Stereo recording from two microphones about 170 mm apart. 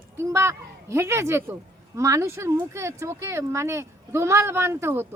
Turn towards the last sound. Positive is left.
turn(degrees=-15)  # may be behind; listen again after turning